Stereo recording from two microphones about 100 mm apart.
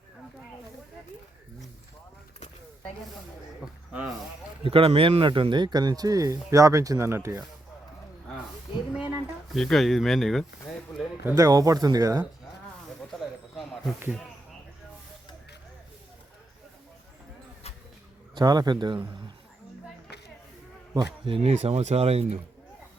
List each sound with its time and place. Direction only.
4.6 s speech: 70° right (ahead or behind); by 7.4 s 25° right (ahead or behind)
8.9 s a sound: 10° right (ahead or behind)
9.6 s speech: 5° left (ahead or behind)
11.0 s a sound: 5° right (ahead or behind)
11.3 s speech: 40° right (ahead or behind)
13.1 s snake: centre (ahead or behind)
18.3 s a man's voice: 45° right (ahead or behind)
21.2 s speech: 80° right